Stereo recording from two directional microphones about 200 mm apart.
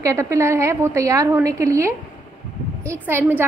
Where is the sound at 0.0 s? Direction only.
15° right (ahead or behind).